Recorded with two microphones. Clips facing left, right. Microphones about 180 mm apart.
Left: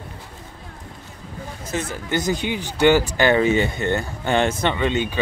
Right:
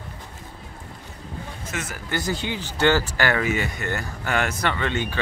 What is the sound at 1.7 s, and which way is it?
Speech, 30° left (ahead or behind).